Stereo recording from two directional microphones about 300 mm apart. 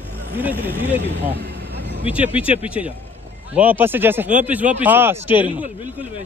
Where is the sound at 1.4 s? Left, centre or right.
Right.